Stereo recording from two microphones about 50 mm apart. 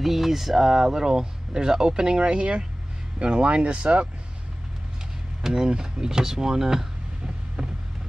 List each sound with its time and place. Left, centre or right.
0.0 s speech: centre; by 4.1 s right
5.4 s speech: centre